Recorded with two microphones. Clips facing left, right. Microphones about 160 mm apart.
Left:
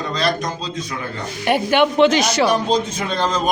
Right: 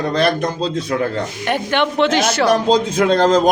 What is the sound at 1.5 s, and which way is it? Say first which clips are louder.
A woman's voice: left 3 dB; 10° left (ahead or behind).